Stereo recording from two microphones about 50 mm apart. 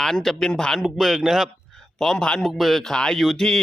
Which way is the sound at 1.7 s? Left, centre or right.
Centre.